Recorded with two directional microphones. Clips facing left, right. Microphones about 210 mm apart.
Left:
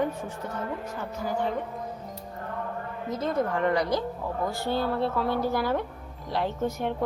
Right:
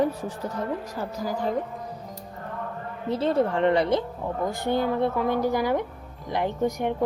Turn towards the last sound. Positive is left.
turn(degrees=-15)  # may be behind; listen again after turning